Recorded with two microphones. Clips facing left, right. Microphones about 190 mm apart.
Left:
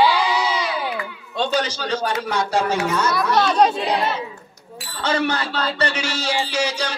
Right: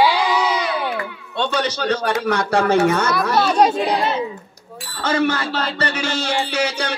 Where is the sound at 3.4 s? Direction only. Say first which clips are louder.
Right 1 dB; 5° right (ahead or behind).